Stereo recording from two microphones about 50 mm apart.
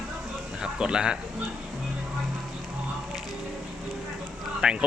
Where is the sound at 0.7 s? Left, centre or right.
Centre.